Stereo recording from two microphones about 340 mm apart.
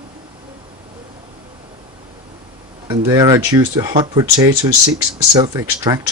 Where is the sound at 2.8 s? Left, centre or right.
Centre.